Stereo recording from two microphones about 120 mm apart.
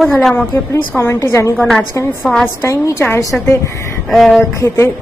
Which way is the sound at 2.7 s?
25° left (ahead or behind).